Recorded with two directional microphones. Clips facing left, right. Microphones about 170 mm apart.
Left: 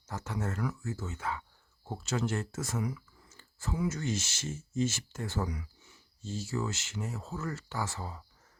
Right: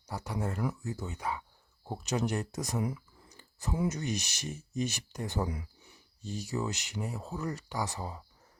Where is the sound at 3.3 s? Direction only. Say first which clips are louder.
Right 1 dB; 15° right (ahead or behind).